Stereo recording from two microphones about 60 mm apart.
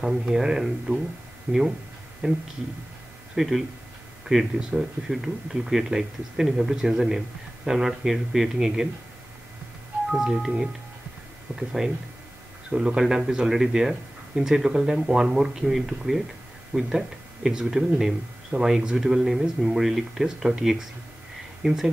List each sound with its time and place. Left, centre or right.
0.0 s speech: centre
1.5 s speech: right
2.2 s speech: centre
3.3 s speech: centre
10.1 s speech: centre
11.8 s speech: centre